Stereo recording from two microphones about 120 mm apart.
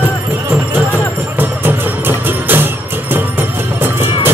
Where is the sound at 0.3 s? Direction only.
15° right (ahead or behind).